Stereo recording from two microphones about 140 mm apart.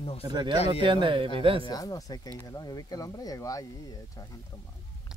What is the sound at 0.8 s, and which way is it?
Speech, 35° right (ahead or behind).